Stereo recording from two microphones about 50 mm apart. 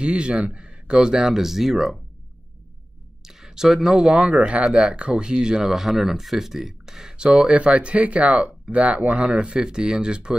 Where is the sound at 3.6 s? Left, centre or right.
Centre.